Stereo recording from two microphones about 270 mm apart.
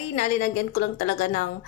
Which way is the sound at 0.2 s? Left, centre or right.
Left.